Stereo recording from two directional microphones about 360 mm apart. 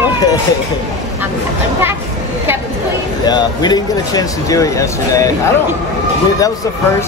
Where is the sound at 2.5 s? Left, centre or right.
Centre.